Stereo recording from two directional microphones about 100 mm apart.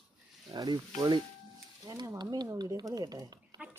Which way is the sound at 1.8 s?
40° right (ahead or behind).